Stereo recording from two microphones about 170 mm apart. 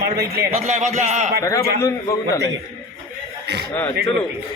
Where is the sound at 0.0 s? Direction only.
65° right (ahead or behind).